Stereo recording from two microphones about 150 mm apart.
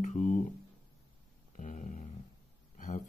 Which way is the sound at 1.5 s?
55° left (ahead or behind).